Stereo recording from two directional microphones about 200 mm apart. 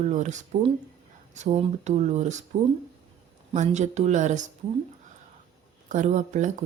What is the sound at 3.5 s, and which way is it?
Speech, 35° right (ahead or behind).